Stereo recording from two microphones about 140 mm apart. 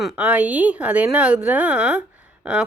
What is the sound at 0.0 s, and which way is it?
Speech, 10° right (ahead or behind).